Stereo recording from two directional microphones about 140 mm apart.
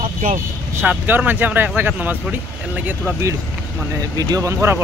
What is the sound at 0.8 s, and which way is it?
Speech, 15° right (ahead or behind).